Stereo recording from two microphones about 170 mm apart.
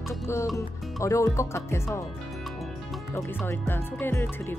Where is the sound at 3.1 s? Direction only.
10° left (ahead or behind).